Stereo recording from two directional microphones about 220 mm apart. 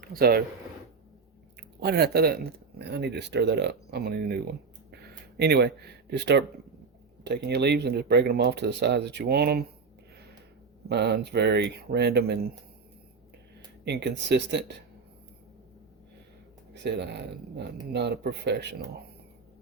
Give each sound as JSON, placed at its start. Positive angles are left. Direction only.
{"t": 0.0, "sound": "speech", "side_deg": -40}
{"t": 1.5, "sound": "speech", "side_deg": -50}
{"t": 10.8, "sound": "speech", "side_deg": -50}
{"t": 13.8, "sound": "speech", "side_deg": -50}
{"t": 16.7, "sound": "speech", "side_deg": -50}